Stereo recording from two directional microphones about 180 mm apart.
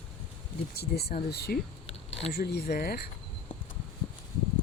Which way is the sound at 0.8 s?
60° left (ahead or behind).